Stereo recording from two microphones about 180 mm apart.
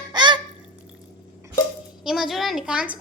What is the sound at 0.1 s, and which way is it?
Honk, 25° right (ahead or behind).